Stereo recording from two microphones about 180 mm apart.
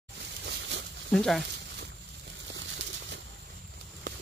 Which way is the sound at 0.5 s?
80° right.